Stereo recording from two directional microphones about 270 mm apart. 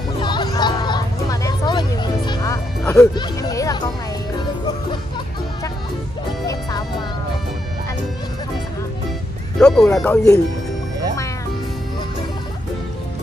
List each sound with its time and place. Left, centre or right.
0.2 s music: centre
3.2 s a sound: centre
9.6 s speech: centre